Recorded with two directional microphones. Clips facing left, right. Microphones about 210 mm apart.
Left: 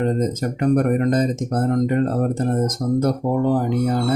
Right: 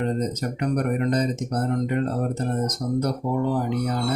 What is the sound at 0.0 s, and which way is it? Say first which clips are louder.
Speech: left 4 dB; 45° left (ahead or behind).